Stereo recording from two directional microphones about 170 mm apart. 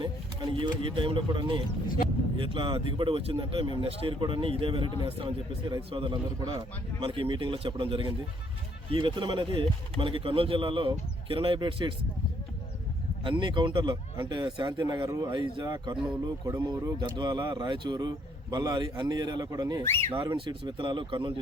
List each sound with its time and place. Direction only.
0.5 s speech: 30° right (ahead or behind)
13.2 s speech: 30° right (ahead or behind)
19.8 s speech: 15° left (ahead or behind)
20.2 s speech: 25° right (ahead or behind)